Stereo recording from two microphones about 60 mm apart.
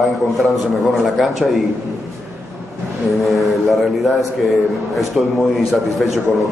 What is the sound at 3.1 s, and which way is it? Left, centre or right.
A man's voice, centre.